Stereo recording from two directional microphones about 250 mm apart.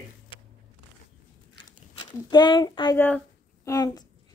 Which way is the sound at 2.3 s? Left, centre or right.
Centre.